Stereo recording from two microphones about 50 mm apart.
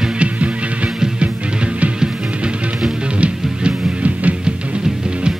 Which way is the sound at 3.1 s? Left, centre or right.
Right.